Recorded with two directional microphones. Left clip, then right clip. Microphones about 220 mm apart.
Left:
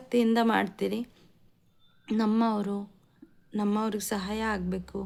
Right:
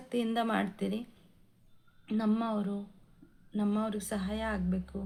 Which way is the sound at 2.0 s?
45° left (ahead or behind).